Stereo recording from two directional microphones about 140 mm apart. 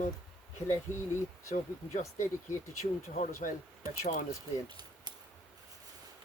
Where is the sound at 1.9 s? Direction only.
55° left (ahead or behind).